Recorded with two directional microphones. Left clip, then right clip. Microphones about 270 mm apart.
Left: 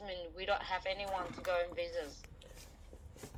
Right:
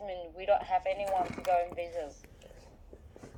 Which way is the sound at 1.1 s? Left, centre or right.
Right.